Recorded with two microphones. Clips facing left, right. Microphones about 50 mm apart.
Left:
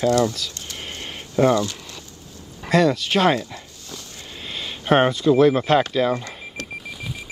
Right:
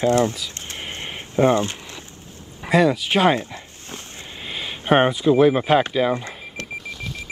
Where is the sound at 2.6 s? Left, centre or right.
Centre.